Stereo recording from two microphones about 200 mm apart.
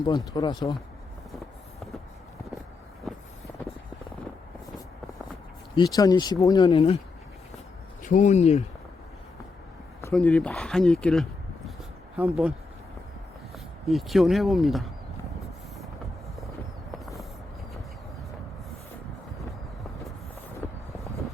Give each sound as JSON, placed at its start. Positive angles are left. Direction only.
{"t": 0.0, "sound": "speech", "side_deg": 20}
{"t": 5.7, "sound": "speech", "side_deg": 20}
{"t": 8.0, "sound": "speech", "side_deg": 40}
{"t": 10.1, "sound": "speech", "side_deg": 5}
{"t": 13.8, "sound": "speech", "side_deg": 0}
{"t": 20.6, "sound": "vehicle", "side_deg": 10}